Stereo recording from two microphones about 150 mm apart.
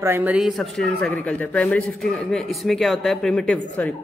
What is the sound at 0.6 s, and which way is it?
A man's voice, 5° left (ahead or behind).